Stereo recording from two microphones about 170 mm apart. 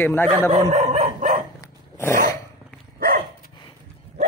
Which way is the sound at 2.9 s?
60° right (ahead or behind).